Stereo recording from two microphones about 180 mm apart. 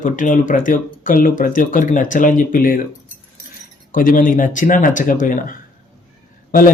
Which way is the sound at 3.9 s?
50° left (ahead or behind).